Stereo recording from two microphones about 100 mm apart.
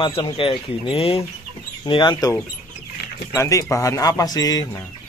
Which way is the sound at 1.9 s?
55° left (ahead or behind).